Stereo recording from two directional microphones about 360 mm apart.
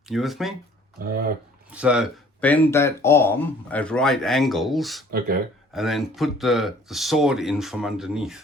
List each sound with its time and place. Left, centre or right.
0.1 s speech: centre
0.9 s speech: right
1.7 s speech: centre